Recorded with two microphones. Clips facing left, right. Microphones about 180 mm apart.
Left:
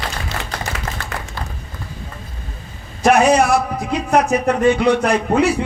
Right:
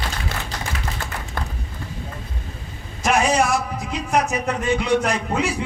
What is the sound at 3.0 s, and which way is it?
A man's voice, 60° left (ahead or behind).